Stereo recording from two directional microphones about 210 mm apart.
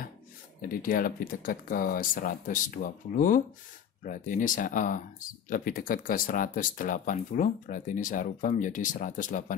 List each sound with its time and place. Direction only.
0.6 s speech: 45° left (ahead or behind)